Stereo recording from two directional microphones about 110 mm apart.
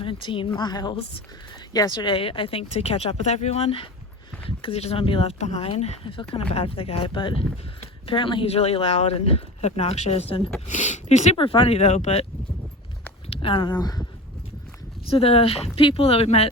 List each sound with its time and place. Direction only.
0.0 s speech: 50° left (ahead or behind)
10.7 s speech: 90° left
11.3 s speech: 55° left (ahead or behind); by 12.2 s 90° left
13.3 s speech: 55° left (ahead or behind); by 14.0 s 35° left (ahead or behind)
15.0 s speech: 60° left (ahead or behind)